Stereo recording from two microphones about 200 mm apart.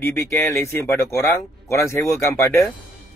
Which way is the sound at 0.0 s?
10° left (ahead or behind).